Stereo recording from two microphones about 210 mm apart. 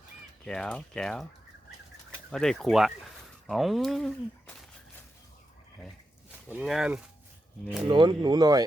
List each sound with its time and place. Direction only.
0.4 s speech: 5° left (ahead or behind)
2.3 s speech: centre (ahead or behind)
6.5 s speech: 5° right (ahead or behind)
7.9 s speech: 20° right (ahead or behind)